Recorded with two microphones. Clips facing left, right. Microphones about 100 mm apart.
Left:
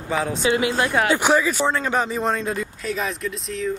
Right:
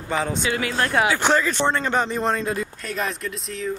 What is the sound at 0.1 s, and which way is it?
Speech, centre (ahead or behind).